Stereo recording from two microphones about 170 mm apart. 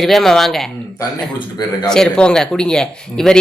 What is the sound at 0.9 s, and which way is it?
Speech, 25° left (ahead or behind).